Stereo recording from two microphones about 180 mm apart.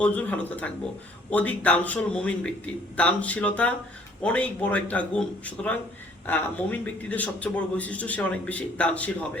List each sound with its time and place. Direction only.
0.0 s a man's voice: 10° left (ahead or behind)